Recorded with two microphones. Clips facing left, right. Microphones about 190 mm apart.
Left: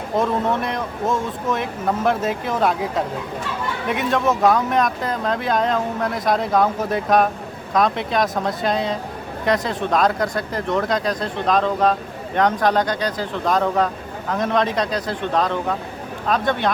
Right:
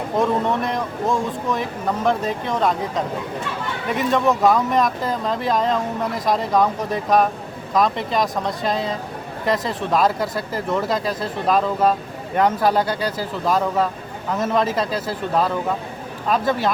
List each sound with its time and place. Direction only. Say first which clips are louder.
0.2 s speech: even; centre (ahead or behind)